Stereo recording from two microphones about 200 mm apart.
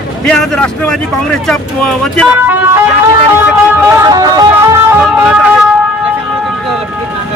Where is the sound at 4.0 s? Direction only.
20° right (ahead or behind).